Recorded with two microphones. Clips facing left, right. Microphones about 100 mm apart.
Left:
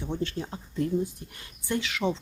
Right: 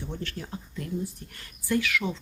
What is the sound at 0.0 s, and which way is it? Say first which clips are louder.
Speech: left 5 dB; 20° left (ahead or behind).